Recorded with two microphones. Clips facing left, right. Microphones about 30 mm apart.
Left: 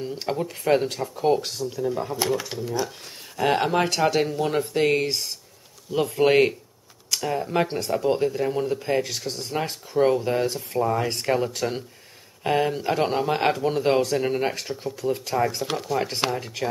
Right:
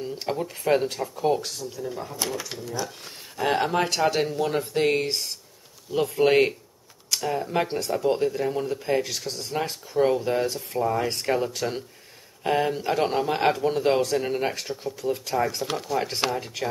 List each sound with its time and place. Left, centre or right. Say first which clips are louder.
0.0 s speech: left 1 dB; centre